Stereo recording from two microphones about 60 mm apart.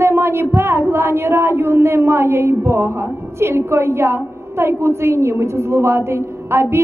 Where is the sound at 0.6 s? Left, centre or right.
Right.